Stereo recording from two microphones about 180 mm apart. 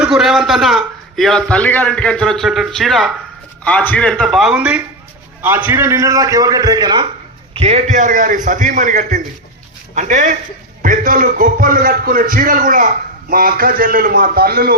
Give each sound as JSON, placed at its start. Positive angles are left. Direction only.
{"t": 0.0, "sound": "a man's voice", "side_deg": -5}
{"t": 7.5, "sound": "a man's voice", "side_deg": -35}